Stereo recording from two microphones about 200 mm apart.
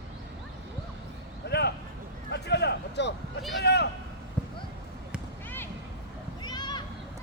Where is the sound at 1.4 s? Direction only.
55° left (ahead or behind).